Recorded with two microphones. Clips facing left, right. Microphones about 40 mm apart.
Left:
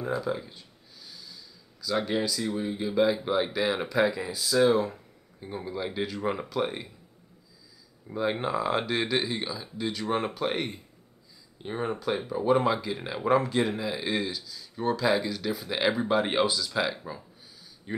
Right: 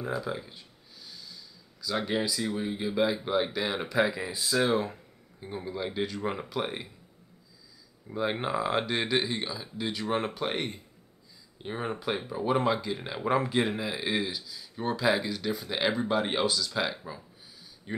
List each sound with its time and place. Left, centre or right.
0.0 s speech: centre
4.3 s speech: right
5.4 s speech: centre
8.1 s speech: centre
13.4 s speech: centre
17.9 s a sound: centre